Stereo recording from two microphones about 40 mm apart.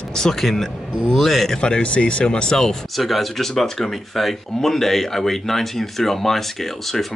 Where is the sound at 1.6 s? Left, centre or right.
Left.